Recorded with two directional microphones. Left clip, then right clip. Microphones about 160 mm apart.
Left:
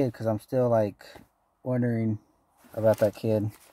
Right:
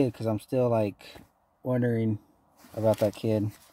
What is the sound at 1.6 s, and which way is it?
Speech, 10° right (ahead or behind).